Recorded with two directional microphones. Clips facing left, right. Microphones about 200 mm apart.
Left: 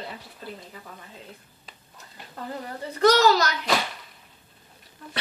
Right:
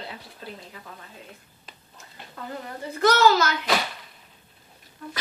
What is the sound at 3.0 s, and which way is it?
Speech, 35° left (ahead or behind).